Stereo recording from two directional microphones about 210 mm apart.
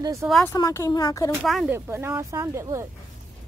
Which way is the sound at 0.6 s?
15° left (ahead or behind).